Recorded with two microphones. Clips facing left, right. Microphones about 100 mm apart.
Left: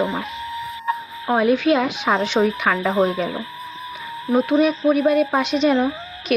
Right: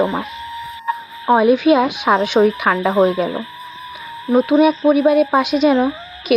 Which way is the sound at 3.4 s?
Centre (ahead or behind).